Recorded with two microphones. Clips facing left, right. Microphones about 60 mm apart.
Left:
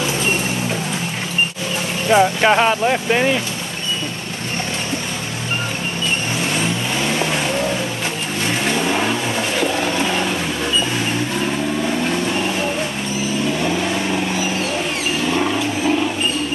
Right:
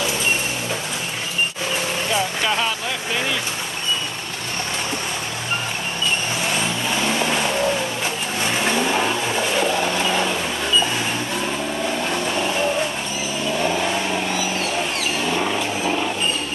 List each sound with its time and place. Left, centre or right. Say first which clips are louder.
2.1 s speech: left 10 dB; left
8.6 s vehicle: left 1 dB; centre
9.8 s pigeon: left 2 dB; centre
13.6 s vehicle: left 1 dB; centre
15.2 s a sound: left 4 dB; centre